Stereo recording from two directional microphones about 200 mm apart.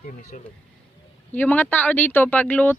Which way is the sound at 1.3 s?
10° left (ahead or behind).